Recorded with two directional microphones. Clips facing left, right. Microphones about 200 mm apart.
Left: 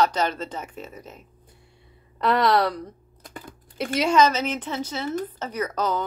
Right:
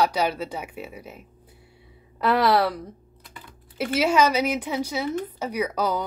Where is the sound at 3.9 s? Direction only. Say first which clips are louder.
Even; 5° right (ahead or behind).